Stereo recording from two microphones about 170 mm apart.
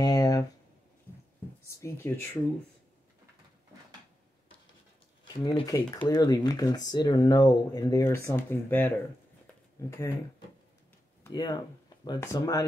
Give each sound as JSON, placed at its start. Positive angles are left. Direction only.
{"t": 0.0, "sound": "a sound", "side_deg": 20}
{"t": 1.8, "sound": "speech", "side_deg": 15}
{"t": 5.3, "sound": "speech", "side_deg": 25}
{"t": 11.2, "sound": "speech", "side_deg": 25}